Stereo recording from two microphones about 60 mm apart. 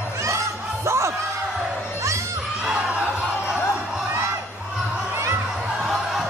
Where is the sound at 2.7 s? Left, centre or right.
Centre.